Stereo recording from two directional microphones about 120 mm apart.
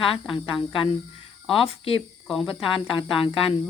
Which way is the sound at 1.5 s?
50° left (ahead or behind).